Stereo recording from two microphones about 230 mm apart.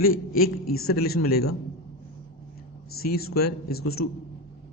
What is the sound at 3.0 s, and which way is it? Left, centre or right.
Speech, left.